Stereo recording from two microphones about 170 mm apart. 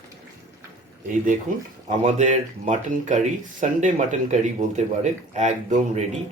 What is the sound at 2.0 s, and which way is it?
Speech, 45° right (ahead or behind).